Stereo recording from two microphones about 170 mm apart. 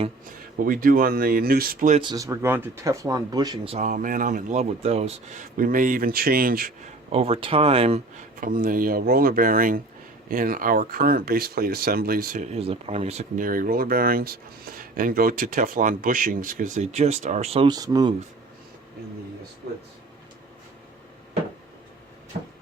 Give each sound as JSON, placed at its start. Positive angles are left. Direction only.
{"t": 0.6, "sound": "speech", "side_deg": -55}
{"t": 2.0, "sound": "speech", "side_deg": -25}
{"t": 3.8, "sound": "speech", "side_deg": -50}
{"t": 7.1, "sound": "speech", "side_deg": -35}
{"t": 8.4, "sound": "speech", "side_deg": -55}
{"t": 12.5, "sound": "speech", "side_deg": -35}
{"t": 17.7, "sound": "speech", "side_deg": -20}
{"t": 19.6, "sound": "speech", "side_deg": -70}